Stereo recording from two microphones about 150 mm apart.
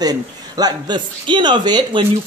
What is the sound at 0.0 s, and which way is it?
A man's voice, 25° right (ahead or behind).